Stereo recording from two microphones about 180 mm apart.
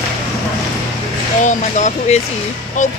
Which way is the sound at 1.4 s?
40° left (ahead or behind).